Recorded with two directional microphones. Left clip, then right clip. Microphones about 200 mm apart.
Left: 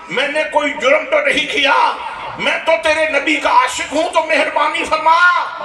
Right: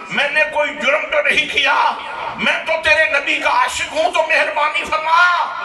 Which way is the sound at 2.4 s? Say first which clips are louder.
Left 3 dB; 40° left (ahead or behind).